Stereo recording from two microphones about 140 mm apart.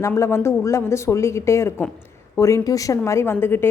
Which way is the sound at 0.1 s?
20° left (ahead or behind).